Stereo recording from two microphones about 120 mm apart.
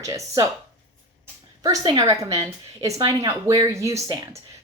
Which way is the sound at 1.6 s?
35° right (ahead or behind).